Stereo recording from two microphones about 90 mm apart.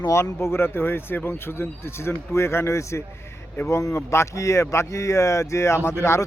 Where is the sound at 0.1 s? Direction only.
30° left (ahead or behind).